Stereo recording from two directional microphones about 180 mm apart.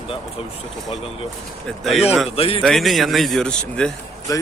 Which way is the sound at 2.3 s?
30° left (ahead or behind).